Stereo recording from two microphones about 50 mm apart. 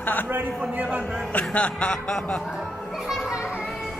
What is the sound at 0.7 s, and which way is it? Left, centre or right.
Speech, right.